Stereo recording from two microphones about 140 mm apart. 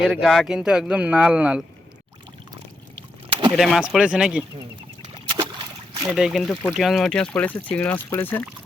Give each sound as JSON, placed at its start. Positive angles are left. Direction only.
{"t": 0.0, "sound": "speech", "side_deg": -5}
{"t": 3.5, "sound": "speech", "side_deg": 0}
{"t": 5.0, "sound": "a sound", "side_deg": -40}
{"t": 6.1, "sound": "speech", "side_deg": 0}